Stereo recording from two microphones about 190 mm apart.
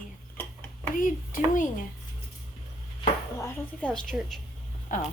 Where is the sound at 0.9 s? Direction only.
45° left (ahead or behind).